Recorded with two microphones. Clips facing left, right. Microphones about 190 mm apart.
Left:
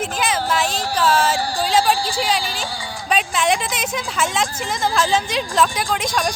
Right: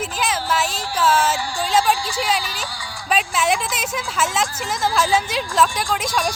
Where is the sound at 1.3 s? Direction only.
35° left (ahead or behind).